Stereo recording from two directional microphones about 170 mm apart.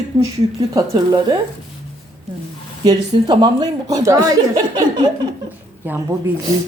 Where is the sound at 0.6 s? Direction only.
20° right (ahead or behind).